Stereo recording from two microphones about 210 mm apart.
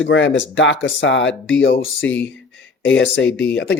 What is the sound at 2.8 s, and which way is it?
Speech, 60° left (ahead or behind).